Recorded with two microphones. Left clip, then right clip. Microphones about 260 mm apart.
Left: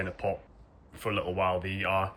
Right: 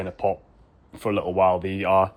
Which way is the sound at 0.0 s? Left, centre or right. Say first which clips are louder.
Right 7 dB; centre.